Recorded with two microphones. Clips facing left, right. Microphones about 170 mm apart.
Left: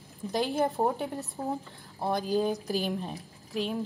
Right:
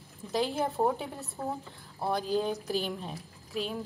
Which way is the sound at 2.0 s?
Centre (ahead or behind).